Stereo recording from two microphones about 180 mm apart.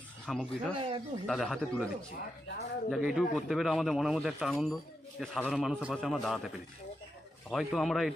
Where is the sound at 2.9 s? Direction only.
Centre (ahead or behind).